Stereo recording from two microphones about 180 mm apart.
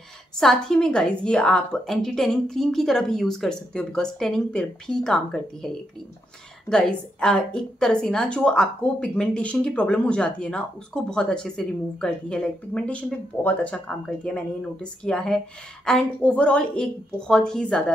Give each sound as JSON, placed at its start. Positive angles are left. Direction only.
{"t": 0.4, "sound": "a woman's voice", "side_deg": 5}
{"t": 6.7, "sound": "a woman's voice", "side_deg": 5}